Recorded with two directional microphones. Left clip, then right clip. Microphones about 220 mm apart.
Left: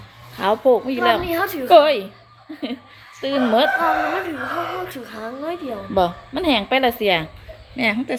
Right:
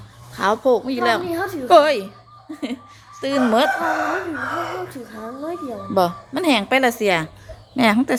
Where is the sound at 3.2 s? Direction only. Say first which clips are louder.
Even; centre (ahead or behind).